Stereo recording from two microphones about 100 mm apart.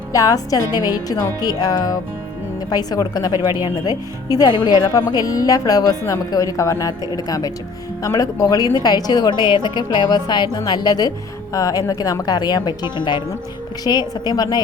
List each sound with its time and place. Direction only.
0.1 s a woman's voice: 35° left (ahead or behind)